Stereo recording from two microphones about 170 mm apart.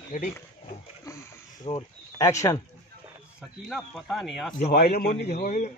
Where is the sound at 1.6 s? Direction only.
30° left (ahead or behind).